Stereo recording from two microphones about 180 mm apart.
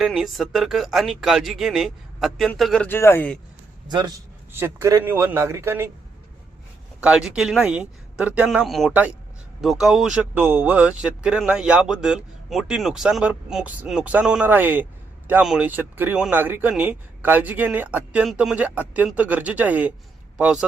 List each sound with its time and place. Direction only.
0.0 s speech: centre (ahead or behind)
3.8 s a man's voice: 25° right (ahead or behind)
7.0 s speech: 5° right (ahead or behind)